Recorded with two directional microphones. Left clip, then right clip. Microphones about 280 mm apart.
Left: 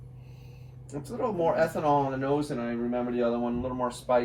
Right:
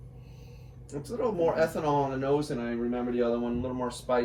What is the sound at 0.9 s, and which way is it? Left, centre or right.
Speech, centre.